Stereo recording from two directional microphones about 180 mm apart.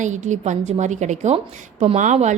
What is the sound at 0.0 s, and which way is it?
A woman's voice, 40° right (ahead or behind).